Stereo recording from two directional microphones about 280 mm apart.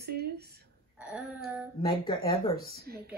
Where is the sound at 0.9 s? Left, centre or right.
Centre.